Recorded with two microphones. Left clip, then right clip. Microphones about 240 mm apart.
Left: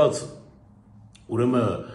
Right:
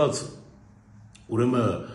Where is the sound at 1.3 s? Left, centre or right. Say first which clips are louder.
Left 1 dB; centre.